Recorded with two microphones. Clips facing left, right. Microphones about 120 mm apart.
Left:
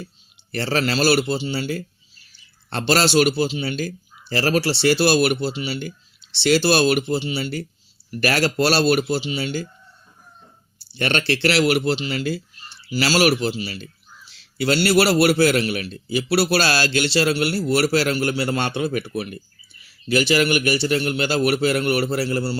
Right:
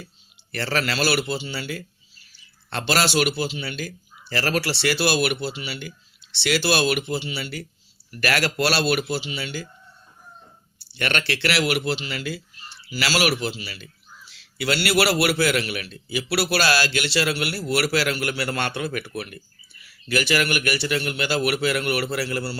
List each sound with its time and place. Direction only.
0.5 s a man's voice: 30° left (ahead or behind)
10.9 s a man's voice: 30° left (ahead or behind)